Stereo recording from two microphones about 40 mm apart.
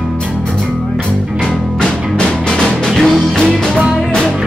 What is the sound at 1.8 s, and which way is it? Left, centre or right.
Music, centre.